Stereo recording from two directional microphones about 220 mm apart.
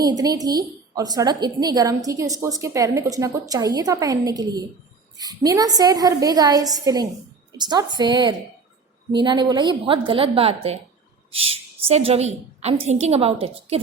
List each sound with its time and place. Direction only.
0.0 s a woman's voice: 15° right (ahead or behind)